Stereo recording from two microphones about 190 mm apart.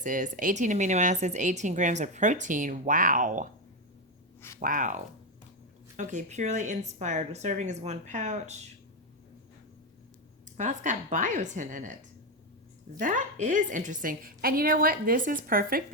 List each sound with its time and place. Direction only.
0.0 s speech: 45° right (ahead or behind)
4.4 s a sound: 15° left (ahead or behind)
4.6 s a woman's voice: 45° right (ahead or behind)
6.0 s speech: 40° right (ahead or behind)
10.6 s speech: 40° right (ahead or behind)
13.0 s a woman's voice: 40° right (ahead or behind)